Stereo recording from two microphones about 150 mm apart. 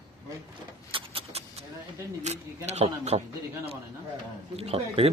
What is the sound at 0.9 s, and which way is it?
Vehicle, 35° right (ahead or behind).